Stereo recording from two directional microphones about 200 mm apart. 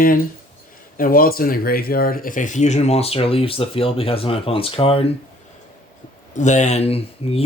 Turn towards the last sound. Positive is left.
turn(degrees=30)  # may be behind; listen again after turning